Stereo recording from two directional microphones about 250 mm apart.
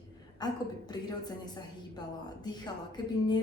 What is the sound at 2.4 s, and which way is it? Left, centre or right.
Speech, centre.